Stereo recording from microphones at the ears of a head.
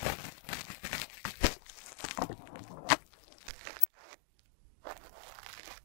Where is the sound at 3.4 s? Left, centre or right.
Right.